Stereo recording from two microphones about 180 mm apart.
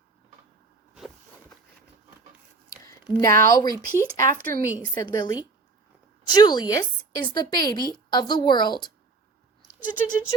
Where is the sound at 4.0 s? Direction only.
15° left (ahead or behind).